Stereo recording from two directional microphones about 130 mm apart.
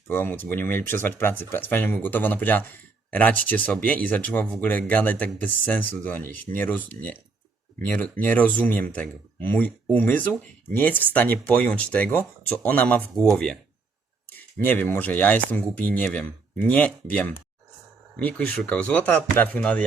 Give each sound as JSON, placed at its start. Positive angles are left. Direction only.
{"t": 0.1, "sound": "speech", "side_deg": 15}